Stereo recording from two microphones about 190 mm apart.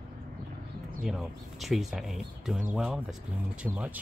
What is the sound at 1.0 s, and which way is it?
Speech, centre (ahead or behind).